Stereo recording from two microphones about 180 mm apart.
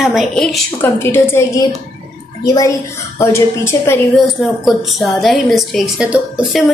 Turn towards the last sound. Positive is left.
turn(degrees=-5)  # may be behind; listen again after turning